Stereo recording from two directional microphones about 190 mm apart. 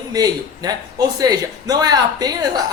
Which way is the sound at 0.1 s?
20° right (ahead or behind).